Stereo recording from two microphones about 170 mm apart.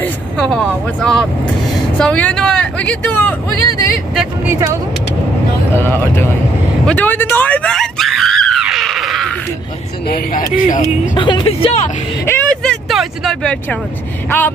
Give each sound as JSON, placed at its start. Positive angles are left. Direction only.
{"t": 0.0, "sound": "a sound", "side_deg": 5}
{"t": 2.0, "sound": "speech", "side_deg": 5}
{"t": 4.1, "sound": "speech", "side_deg": -5}
{"t": 5.8, "sound": "speech", "side_deg": 15}
{"t": 6.9, "sound": "screaming", "side_deg": 10}
{"t": 10.0, "sound": "speech", "side_deg": 60}
{"t": 11.1, "sound": "speech", "side_deg": 25}
{"t": 12.3, "sound": "vehicle", "side_deg": 10}